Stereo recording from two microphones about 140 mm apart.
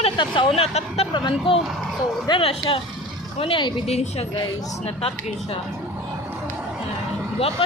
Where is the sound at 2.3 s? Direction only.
35° left (ahead or behind).